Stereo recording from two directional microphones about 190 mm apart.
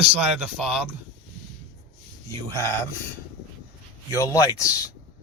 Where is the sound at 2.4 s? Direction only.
15° left (ahead or behind).